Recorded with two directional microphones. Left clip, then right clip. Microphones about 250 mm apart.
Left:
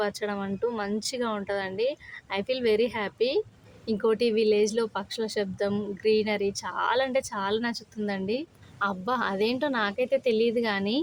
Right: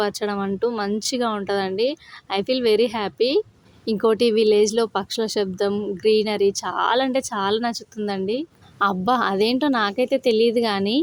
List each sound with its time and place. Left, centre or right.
0.0 s speech: right